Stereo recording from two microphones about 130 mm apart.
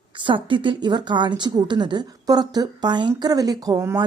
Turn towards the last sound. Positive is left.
turn(degrees=-30)  # may be behind; listen again after turning